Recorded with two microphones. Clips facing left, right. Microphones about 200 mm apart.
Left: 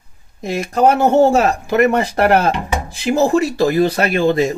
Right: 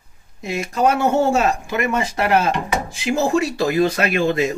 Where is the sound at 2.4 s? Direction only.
35° left (ahead or behind).